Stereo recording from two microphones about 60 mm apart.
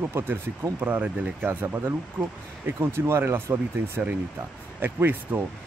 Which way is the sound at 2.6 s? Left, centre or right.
Right.